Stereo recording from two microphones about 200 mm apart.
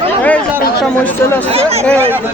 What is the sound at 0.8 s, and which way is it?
Speech, 10° left (ahead or behind).